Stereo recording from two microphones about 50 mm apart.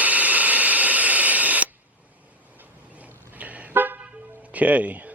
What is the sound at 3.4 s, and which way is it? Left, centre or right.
Car, right.